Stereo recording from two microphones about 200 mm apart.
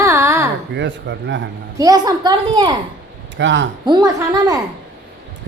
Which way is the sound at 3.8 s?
20° right (ahead or behind).